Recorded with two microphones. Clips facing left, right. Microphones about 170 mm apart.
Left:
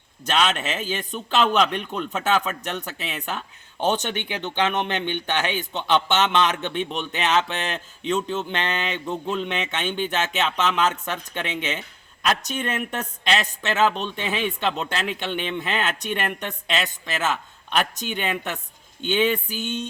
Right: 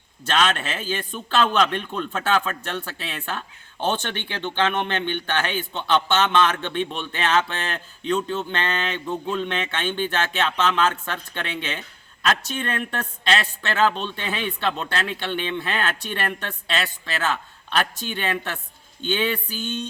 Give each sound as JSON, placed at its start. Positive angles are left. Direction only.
{"t": 0.3, "sound": "speech", "side_deg": 15}